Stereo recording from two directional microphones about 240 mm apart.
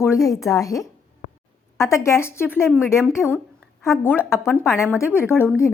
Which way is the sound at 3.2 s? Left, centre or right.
Centre.